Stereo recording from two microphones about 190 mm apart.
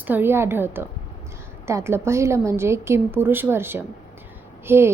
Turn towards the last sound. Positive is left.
turn(degrees=-15)  # may be behind; listen again after turning